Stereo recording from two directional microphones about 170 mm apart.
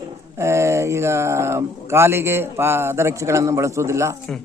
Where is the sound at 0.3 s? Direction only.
15° right (ahead or behind).